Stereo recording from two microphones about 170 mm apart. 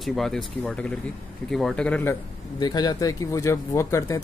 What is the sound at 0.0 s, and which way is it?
Speech, centre (ahead or behind).